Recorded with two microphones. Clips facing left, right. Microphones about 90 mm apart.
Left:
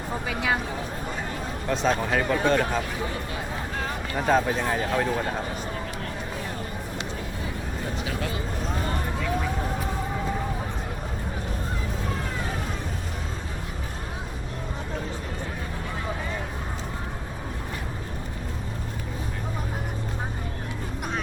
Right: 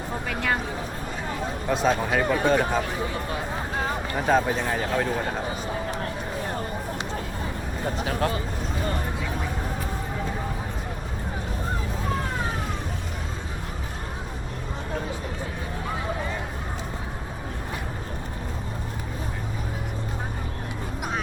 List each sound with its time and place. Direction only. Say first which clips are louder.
0.3 s speech: even; 5° left (ahead or behind)
1.6 s speech: right 1 dB; 5° right (ahead or behind)
3.8 s a sound: right 3 dB; 25° right (ahead or behind)
4.3 s speech: even; centre (ahead or behind)
7.9 s speech: right 7 dB; 45° right (ahead or behind)